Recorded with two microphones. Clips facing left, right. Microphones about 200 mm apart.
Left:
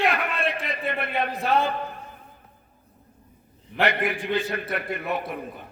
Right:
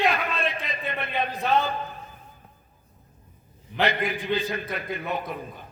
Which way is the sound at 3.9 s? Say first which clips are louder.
Left 2 dB; 55° left (ahead or behind).